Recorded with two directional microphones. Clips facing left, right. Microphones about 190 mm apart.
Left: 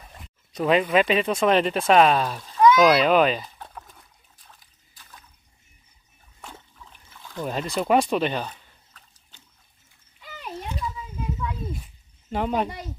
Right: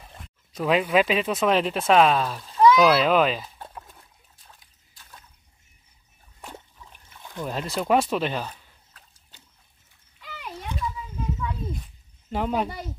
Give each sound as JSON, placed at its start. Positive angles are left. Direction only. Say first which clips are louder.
{"t": 0.0, "sound": "speech", "louder": "even", "side_deg": 0}
{"t": 6.4, "sound": "trickle", "louder": "right 2 dB", "side_deg": -15}
{"t": 7.4, "sound": "speech", "louder": "left 1 dB", "side_deg": 0}
{"t": 10.2, "sound": "a sound", "louder": "left 2 dB", "side_deg": 15}
{"t": 11.7, "sound": "cricket", "louder": "even", "side_deg": 0}